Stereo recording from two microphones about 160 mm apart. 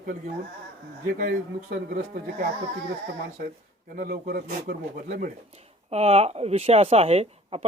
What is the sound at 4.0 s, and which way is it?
Speech, 65° right (ahead or behind).